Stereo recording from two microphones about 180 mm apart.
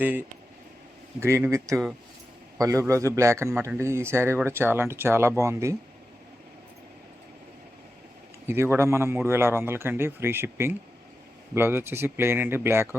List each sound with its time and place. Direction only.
0.0 s speech: 10° right (ahead or behind)
8.4 s speech: 15° right (ahead or behind)